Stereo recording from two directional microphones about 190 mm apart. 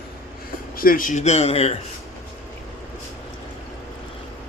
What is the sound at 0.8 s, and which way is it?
Speech, 45° left (ahead or behind).